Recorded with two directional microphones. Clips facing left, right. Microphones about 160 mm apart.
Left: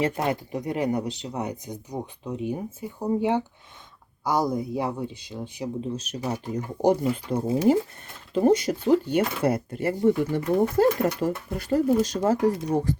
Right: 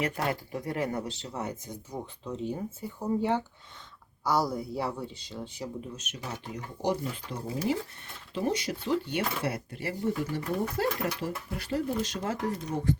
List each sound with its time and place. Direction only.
0.0 s speech: 20° left (ahead or behind)
5.8 s speech: 35° left (ahead or behind)